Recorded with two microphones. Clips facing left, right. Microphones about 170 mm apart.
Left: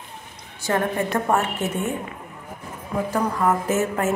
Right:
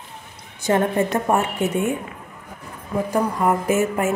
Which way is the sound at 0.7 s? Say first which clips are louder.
Right 4 dB; 20° right (ahead or behind).